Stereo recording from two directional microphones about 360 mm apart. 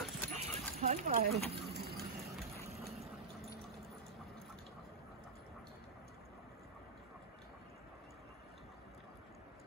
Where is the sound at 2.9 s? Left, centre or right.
Centre.